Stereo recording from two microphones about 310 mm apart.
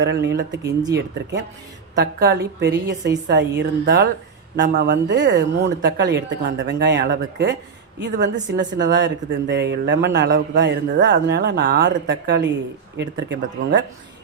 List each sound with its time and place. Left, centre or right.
0.0 s speech: right
0.6 s speech: centre
0.9 s speech: right